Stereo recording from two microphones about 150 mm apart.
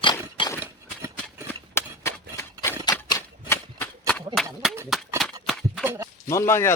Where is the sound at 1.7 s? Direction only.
15° left (ahead or behind).